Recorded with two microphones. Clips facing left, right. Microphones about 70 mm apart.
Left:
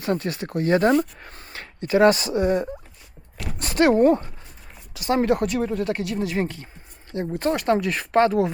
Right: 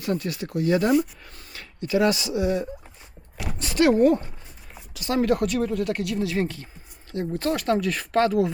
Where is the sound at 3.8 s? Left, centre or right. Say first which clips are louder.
Left 1 dB; left.